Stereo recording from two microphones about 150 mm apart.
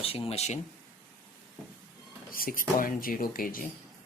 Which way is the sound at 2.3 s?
70° left (ahead or behind).